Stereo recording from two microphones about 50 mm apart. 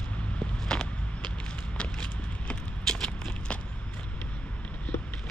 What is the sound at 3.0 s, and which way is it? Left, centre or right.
Walk, left.